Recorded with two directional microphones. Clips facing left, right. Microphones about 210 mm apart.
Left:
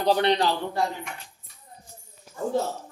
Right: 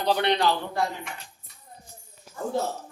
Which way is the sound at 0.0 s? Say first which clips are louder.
Left 2 dB; 35° left (ahead or behind).